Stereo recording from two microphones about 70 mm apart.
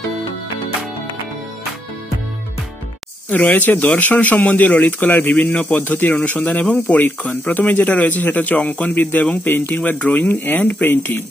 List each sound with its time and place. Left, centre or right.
3.3 s speech: left